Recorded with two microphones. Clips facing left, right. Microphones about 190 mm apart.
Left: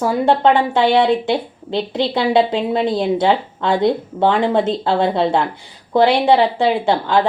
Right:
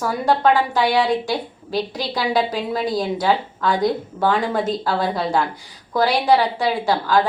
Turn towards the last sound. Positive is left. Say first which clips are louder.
# left 3 dB
turn(degrees=25)  # may be behind; listen again after turning